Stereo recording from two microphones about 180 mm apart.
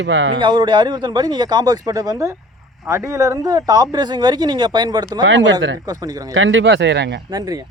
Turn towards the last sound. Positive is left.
turn(degrees=-70)  # may be behind; listen again after turning